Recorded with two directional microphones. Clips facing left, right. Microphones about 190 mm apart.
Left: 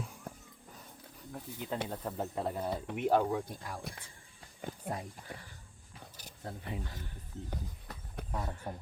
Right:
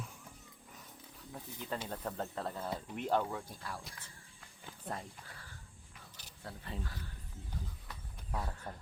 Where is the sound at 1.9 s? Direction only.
10° left (ahead or behind).